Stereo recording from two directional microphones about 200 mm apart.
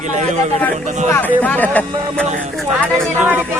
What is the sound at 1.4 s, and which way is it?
Speech, 10° left (ahead or behind).